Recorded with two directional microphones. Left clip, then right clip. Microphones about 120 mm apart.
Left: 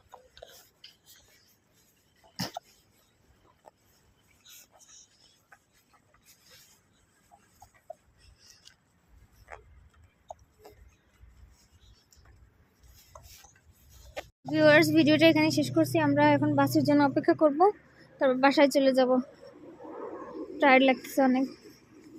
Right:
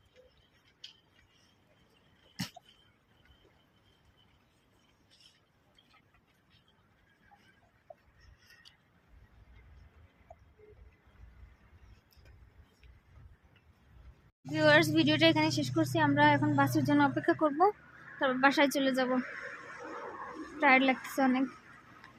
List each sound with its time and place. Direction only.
2.4 s cough: 5° right (ahead or behind)
14.5 s speech: 5° left (ahead or behind)
17.3 s speech: 10° right (ahead or behind)
17.9 s a woman's voice: 5° left (ahead or behind)
19.2 s a sound: 30° left (ahead or behind)
19.8 s a sound: centre (ahead or behind)